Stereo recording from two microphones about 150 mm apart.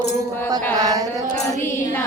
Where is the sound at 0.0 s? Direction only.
90° left.